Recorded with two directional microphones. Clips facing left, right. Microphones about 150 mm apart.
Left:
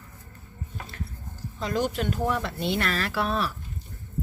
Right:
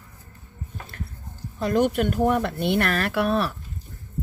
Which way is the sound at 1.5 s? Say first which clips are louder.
Right 6 dB; 55° right (ahead or behind).